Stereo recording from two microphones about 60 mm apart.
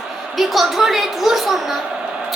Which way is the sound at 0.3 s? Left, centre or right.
Centre.